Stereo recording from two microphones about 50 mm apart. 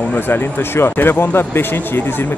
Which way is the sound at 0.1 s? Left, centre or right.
Left.